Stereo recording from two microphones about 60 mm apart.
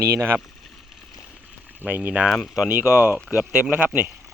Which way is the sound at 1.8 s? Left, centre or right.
Right.